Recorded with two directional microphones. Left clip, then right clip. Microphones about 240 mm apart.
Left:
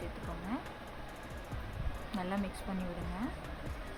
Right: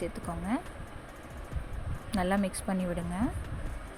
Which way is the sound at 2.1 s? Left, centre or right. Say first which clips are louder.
Right 9 dB; right.